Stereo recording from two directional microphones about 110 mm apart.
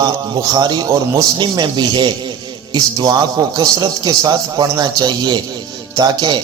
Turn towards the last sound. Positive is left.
turn(degrees=-40)  # may be behind; listen again after turning